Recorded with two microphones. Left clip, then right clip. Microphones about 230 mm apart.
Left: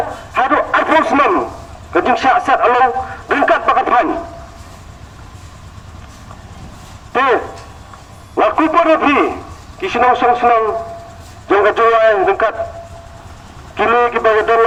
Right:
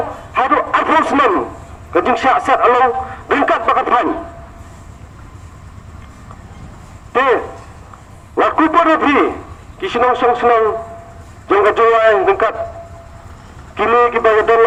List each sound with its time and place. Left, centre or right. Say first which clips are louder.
0.3 s a sound: even; left
1.9 s a man's voice: left 1 dB; left
7.1 s a man's voice: even; left
13.7 s a man's voice: even; left